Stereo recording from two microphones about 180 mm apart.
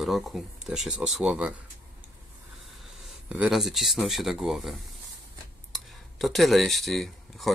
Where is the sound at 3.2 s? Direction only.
5° right (ahead or behind).